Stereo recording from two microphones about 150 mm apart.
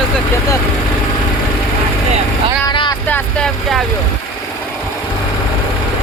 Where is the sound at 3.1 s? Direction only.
5° left (ahead or behind).